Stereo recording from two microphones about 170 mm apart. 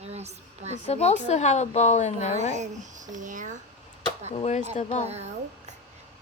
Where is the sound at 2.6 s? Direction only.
45° right (ahead or behind).